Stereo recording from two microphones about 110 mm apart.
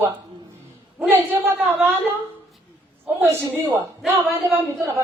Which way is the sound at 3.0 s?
20° right (ahead or behind).